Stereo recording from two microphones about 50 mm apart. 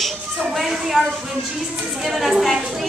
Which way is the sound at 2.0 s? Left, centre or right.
Centre.